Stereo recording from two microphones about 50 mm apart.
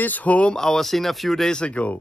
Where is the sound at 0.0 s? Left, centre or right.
Left.